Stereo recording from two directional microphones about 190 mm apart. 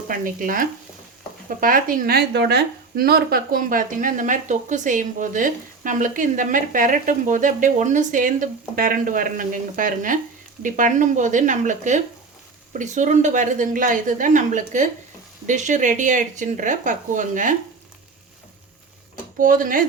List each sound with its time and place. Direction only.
0.1 s a woman's voice: 45° right (ahead or behind)
19.4 s a woman's voice: 45° right (ahead or behind)